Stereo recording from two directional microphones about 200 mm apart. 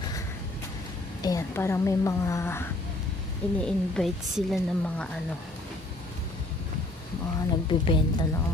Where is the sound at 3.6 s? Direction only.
Centre (ahead or behind).